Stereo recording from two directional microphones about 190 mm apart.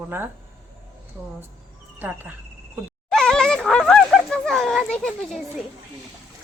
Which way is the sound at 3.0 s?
5° left (ahead or behind).